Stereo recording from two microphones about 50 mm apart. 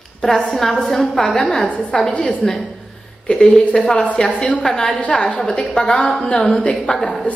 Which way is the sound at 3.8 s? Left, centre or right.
Left.